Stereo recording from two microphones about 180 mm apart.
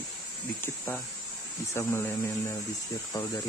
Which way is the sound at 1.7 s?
15° left (ahead or behind).